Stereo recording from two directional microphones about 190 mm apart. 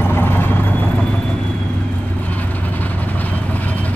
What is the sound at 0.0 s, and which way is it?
Vehicle, 10° left (ahead or behind).